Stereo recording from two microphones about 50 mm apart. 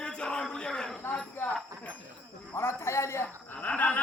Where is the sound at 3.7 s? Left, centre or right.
Left.